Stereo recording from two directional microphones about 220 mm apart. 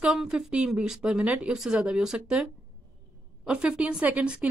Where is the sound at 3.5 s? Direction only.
5° right (ahead or behind).